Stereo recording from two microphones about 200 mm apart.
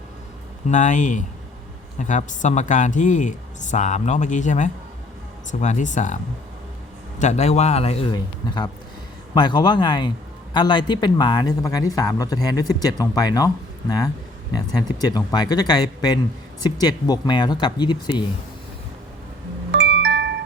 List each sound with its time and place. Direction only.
0.7 s speech: 40° left (ahead or behind)
7.2 s speech: 35° left (ahead or behind); by 13.5 s 20° left (ahead or behind)
14.5 s speech: 20° left (ahead or behind)
19.7 s music: 65° right (ahead or behind)